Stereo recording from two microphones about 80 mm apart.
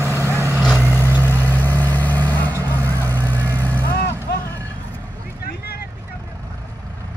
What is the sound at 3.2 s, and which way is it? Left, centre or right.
Vehicle, right.